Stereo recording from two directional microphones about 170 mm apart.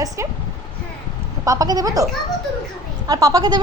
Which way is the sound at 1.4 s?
20° right (ahead or behind).